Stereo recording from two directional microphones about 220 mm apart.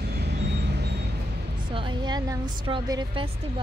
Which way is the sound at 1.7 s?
20° right (ahead or behind).